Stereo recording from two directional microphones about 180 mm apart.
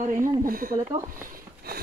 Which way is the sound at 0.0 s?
45° right (ahead or behind).